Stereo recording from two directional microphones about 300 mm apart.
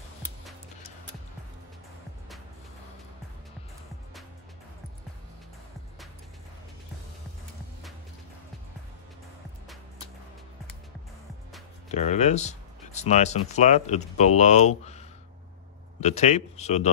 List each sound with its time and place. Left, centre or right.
11.9 s speech: left
14.8 s a sound: left
16.0 s speech: left